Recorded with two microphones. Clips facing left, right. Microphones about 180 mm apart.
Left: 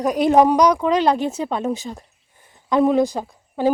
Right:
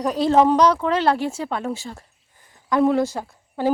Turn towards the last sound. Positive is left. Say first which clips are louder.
# left 3 dB
turn(degrees=15)  # may be behind; listen again after turning